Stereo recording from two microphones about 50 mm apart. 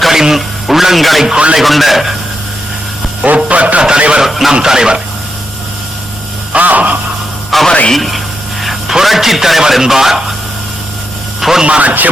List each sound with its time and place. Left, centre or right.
0.0 s radio: centre
1.3 s speech: right
1.5 s speech: centre
3.3 s a man's voice: right
4.3 s speech: centre
6.5 s a sound: right
7.5 s music: centre
7.9 s a man's voice: centre
11.3 s a sound: centre
11.6 s speech: right